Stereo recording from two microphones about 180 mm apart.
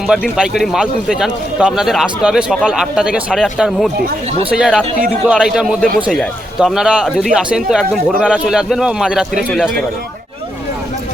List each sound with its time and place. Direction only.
0.1 s a man's voice: 5° right (ahead or behind)
4.3 s speech: 35° right (ahead or behind)
4.5 s a man's voice: 5° right (ahead or behind)